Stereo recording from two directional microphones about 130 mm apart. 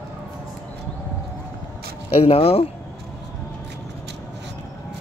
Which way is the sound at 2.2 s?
45° left (ahead or behind).